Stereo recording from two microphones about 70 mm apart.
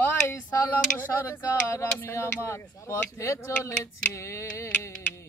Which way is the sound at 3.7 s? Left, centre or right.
Left.